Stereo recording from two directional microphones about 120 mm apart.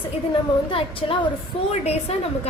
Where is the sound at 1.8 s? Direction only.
60° left (ahead or behind).